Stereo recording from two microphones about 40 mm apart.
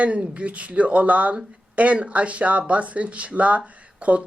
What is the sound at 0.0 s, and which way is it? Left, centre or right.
Speech, right.